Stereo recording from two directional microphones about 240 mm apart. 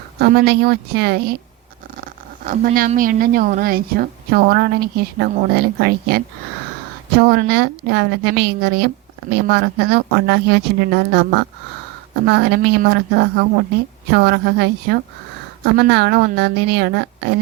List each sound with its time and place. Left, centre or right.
0.2 s speech: right